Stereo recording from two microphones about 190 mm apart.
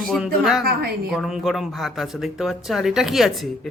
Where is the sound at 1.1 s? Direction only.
Centre (ahead or behind).